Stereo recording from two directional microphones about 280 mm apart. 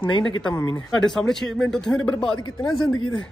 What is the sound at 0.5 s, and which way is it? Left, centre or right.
Speech, centre.